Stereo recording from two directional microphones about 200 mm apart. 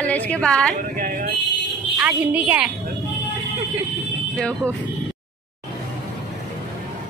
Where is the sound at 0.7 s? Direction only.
45° right (ahead or behind).